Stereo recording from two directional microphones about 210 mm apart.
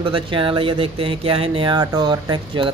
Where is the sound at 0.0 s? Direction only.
25° right (ahead or behind).